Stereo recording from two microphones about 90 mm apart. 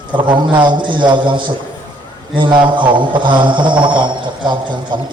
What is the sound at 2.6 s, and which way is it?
A man's voice, 65° right (ahead or behind).